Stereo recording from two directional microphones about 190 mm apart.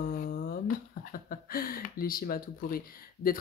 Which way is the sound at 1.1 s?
50° left (ahead or behind).